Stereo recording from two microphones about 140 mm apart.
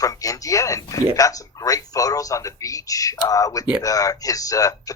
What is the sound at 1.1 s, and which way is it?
Speech, 25° left (ahead or behind).